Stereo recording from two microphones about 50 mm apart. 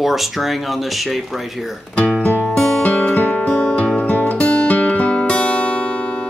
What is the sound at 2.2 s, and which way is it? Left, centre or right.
Music, left.